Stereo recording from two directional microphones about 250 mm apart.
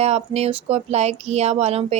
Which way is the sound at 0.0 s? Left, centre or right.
Right.